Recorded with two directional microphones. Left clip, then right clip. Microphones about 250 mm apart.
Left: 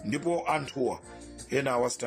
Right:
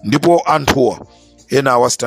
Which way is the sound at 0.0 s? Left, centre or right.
Right.